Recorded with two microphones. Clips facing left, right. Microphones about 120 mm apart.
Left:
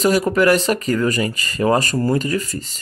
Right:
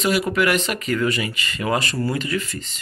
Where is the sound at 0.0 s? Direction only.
40° left (ahead or behind).